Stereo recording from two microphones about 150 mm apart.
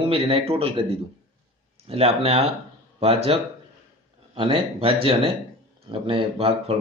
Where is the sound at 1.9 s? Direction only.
40° right (ahead or behind).